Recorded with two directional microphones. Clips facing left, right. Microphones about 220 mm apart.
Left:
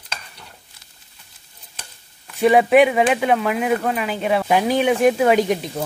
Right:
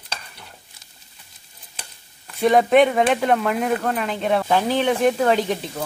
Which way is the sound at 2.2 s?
5° left (ahead or behind).